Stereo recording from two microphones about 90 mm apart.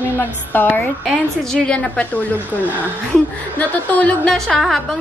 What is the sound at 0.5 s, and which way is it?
Speech, 25° left (ahead or behind).